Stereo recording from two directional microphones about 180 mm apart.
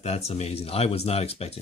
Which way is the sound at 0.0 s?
35° left (ahead or behind).